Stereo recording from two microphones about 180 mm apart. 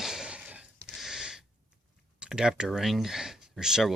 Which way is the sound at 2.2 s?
5° right (ahead or behind).